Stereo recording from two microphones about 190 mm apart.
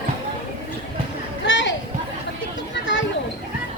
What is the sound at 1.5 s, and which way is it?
Chatter, 75° left (ahead or behind).